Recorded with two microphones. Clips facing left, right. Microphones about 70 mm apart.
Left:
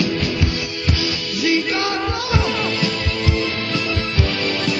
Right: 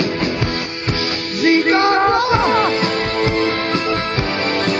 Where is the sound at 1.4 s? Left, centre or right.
Right.